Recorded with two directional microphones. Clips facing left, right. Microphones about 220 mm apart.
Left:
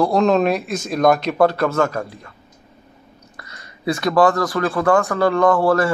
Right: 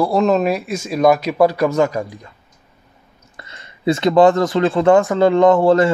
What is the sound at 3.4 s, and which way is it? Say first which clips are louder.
Speech: right 5 dB; 25° right (ahead or behind).